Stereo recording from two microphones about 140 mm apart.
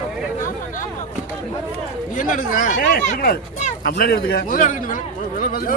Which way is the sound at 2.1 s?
70° left (ahead or behind).